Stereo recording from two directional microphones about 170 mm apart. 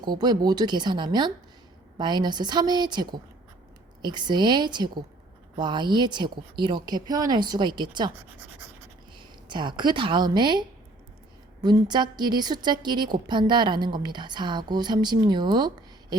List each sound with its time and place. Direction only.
0.0 s a woman's voice: 25° right (ahead or behind)
9.1 s a woman's voice: 25° right (ahead or behind)